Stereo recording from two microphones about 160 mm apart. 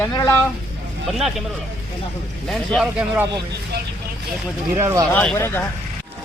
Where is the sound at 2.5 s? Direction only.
Centre (ahead or behind).